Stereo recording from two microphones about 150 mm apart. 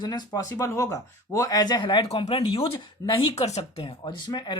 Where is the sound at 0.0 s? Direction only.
30° left (ahead or behind).